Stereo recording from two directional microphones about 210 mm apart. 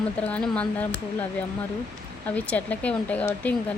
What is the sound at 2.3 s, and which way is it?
A woman's voice, 5° left (ahead or behind).